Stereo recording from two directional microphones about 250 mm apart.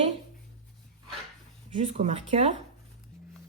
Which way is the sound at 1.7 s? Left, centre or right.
Right.